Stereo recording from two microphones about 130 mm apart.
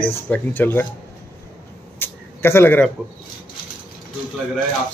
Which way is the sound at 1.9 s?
20° left (ahead or behind).